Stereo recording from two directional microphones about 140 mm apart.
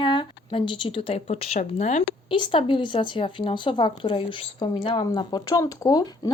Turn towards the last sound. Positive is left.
turn(degrees=30)  # may be behind; listen again after turning